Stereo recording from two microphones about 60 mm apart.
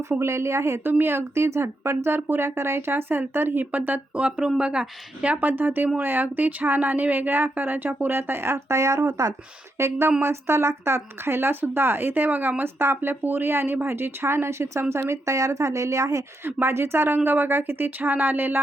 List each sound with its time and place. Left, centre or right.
0.1 s speech: right
0.9 s speech: right
4.1 s a woman's voice: centre; by 9.3 s right
9.7 s speech: right
16.4 s speech: right